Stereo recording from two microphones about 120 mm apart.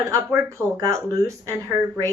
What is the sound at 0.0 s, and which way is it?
A woman's voice, 25° right (ahead or behind).